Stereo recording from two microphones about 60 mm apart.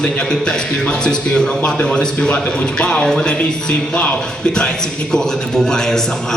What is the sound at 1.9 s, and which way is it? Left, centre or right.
Speech, centre.